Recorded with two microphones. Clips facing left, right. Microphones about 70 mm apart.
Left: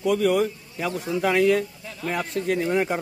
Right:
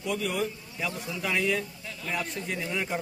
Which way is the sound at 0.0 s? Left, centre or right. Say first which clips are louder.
Left 9 dB; left.